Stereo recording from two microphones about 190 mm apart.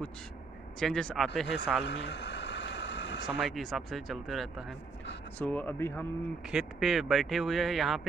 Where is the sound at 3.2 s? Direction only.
Centre (ahead or behind).